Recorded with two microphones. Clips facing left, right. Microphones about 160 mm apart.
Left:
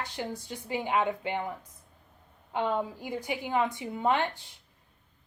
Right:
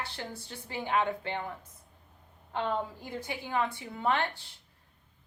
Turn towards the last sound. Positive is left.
turn(degrees=20)  # may be behind; listen again after turning